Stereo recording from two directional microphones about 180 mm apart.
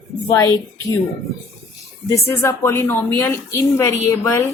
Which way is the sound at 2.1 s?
15° left (ahead or behind).